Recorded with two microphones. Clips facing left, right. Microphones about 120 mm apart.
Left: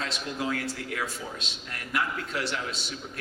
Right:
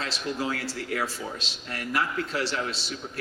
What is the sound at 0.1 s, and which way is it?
A man's voice, 30° right (ahead or behind).